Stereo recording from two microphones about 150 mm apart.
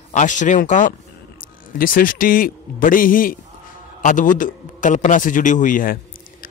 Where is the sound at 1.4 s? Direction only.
70° left (ahead or behind).